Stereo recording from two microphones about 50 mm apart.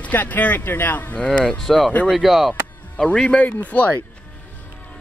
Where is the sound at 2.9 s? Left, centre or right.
Centre.